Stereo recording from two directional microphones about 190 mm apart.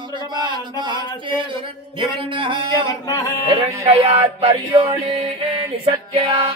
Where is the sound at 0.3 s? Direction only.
25° right (ahead or behind).